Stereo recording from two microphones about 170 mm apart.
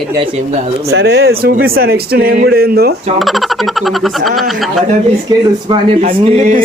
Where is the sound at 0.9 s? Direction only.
80° right.